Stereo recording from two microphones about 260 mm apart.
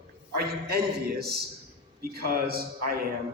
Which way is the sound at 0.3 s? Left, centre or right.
Right.